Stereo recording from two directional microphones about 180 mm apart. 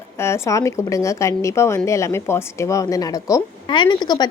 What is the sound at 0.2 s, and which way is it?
A woman's voice, 15° left (ahead or behind).